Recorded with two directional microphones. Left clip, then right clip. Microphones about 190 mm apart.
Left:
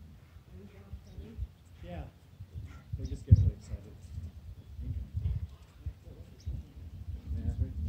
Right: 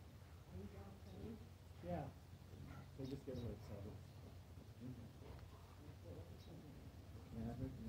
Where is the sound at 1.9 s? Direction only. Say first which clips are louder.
Left 1 dB; 15° left (ahead or behind).